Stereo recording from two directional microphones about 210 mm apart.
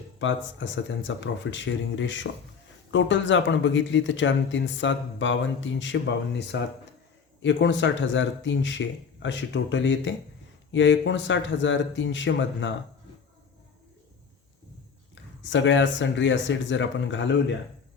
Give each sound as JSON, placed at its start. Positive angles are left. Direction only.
{"t": 0.2, "sound": "speech", "side_deg": 60}
{"t": 15.1, "sound": "speech", "side_deg": 60}